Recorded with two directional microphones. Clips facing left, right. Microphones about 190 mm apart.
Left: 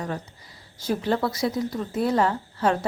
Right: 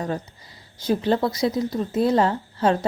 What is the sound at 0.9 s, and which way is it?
A woman's voice, 20° right (ahead or behind).